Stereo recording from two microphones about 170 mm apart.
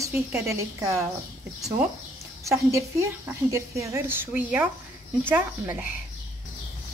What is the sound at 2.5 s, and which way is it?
Speech, 15° right (ahead or behind).